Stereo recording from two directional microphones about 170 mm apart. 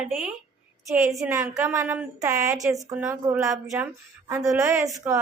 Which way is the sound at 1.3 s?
15° right (ahead or behind).